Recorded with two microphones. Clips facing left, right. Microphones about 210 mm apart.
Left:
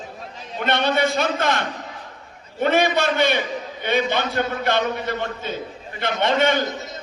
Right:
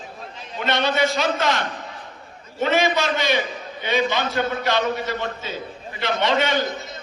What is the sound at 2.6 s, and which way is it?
A man's voice, 55° left (ahead or behind).